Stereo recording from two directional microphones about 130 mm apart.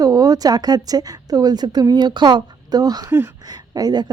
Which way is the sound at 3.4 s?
30° right (ahead or behind).